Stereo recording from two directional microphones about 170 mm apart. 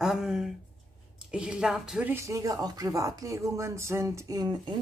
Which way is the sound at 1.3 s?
5° right (ahead or behind).